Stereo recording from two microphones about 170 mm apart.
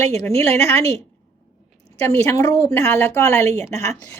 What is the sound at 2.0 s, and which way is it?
A woman's voice, 15° left (ahead or behind).